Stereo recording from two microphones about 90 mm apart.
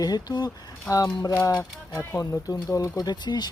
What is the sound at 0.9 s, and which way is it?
Speech, 40° left (ahead or behind).